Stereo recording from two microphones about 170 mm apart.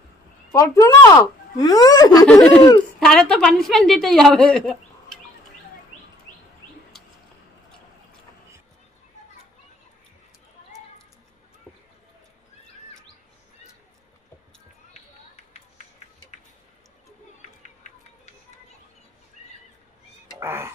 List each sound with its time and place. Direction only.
0.5 s speech: 20° left (ahead or behind)
2.2 s a woman's voice: 5° left (ahead or behind)
20.2 s a sound: 15° right (ahead or behind)